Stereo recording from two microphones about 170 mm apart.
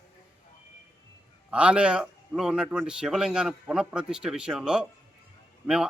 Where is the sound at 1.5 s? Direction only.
5° right (ahead or behind).